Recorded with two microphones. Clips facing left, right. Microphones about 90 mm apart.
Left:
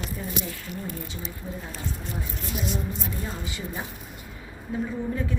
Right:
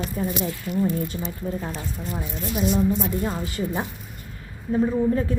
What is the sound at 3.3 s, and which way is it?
Speech, 45° right (ahead or behind).